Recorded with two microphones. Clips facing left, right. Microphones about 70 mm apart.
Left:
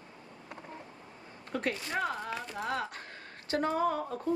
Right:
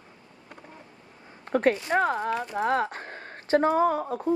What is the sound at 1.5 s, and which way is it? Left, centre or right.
A woman's voice, right.